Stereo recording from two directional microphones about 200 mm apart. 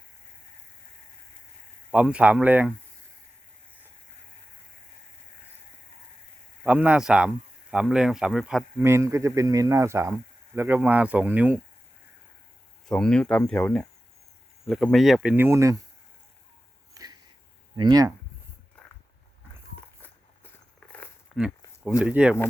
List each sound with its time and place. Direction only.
1.9 s speech: 5° right (ahead or behind)
6.7 s speech: 5° right (ahead or behind)
8.8 s speech: 15° right (ahead or behind)
12.9 s speech: 5° left (ahead or behind); by 15.8 s 15° right (ahead or behind)
16.9 s a sound: 20° right (ahead or behind)
17.7 s speech: 20° right (ahead or behind)
20.0 s a sound: 10° left (ahead or behind)
21.3 s walk: centre (ahead or behind)
21.8 s speech: 5° right (ahead or behind)